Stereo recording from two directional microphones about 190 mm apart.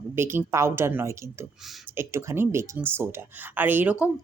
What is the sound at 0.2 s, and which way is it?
Speech, 10° right (ahead or behind).